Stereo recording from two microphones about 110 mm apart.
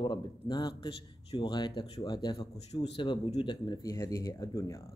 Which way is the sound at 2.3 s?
60° left (ahead or behind).